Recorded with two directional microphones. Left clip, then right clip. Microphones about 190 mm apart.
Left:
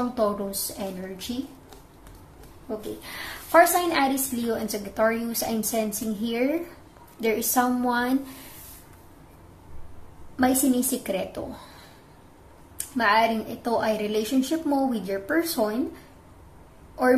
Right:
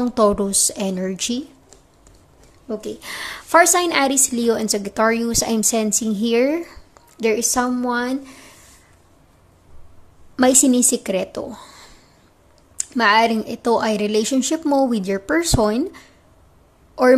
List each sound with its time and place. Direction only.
0.1 s a woman's voice: 45° right (ahead or behind)
3.0 s a woman's voice: 40° right (ahead or behind)
10.3 s a woman's voice: 45° right (ahead or behind)
12.7 s a woman's voice: 45° right (ahead or behind)